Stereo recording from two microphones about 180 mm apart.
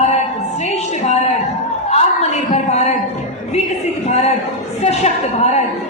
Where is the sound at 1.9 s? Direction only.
35° left (ahead or behind).